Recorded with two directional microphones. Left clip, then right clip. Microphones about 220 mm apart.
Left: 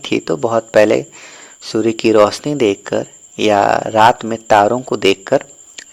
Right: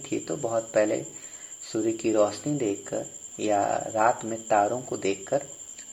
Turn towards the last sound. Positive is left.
turn(degrees=45)  # may be behind; listen again after turning